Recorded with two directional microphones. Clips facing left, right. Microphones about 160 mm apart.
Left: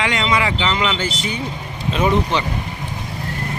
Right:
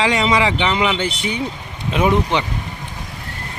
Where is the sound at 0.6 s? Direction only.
15° right (ahead or behind).